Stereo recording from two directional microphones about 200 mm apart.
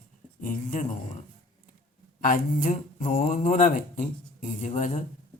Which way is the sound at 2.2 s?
40° left (ahead or behind).